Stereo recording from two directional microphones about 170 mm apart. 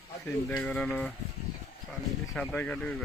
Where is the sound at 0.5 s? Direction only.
10° left (ahead or behind).